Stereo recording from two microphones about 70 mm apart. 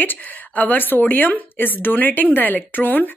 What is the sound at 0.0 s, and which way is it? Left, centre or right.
A woman's voice, left.